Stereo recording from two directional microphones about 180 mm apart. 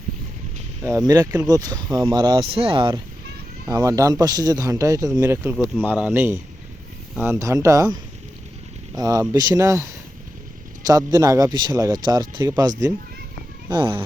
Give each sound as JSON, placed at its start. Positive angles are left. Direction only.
{"t": 0.8, "sound": "speech", "side_deg": -15}
{"t": 9.0, "sound": "speech", "side_deg": -20}